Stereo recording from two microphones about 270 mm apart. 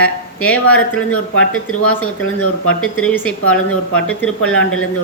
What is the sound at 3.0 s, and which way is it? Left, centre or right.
Speech, centre.